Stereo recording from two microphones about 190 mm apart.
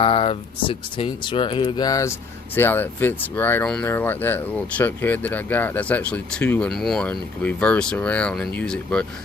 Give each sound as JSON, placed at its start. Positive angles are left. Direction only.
{"t": 0.0, "sound": "speech", "side_deg": 30}